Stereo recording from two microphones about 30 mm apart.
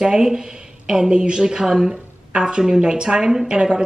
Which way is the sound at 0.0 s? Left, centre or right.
Right.